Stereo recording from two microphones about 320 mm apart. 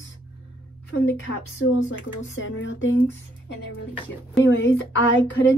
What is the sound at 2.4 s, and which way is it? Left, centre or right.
Speech, left.